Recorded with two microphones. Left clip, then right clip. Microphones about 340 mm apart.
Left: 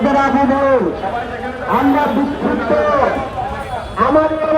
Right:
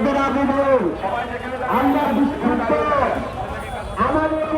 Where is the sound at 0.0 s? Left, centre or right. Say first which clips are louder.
Left 6 dB; left.